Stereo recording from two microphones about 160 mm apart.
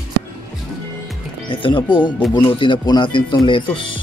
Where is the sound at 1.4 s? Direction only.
30° left (ahead or behind).